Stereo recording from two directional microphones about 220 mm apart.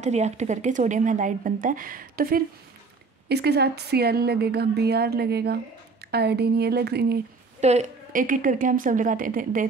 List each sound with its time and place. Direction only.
0.0 s a woman's voice: 30° right (ahead or behind)
7.6 s a woman's voice: 35° right (ahead or behind)